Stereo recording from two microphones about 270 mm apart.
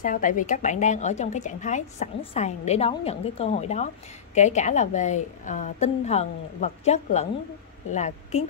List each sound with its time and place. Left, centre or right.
0.0 s speech: left